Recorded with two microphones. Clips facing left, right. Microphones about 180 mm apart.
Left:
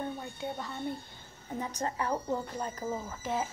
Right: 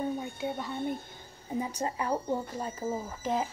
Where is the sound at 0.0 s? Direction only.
10° right (ahead or behind).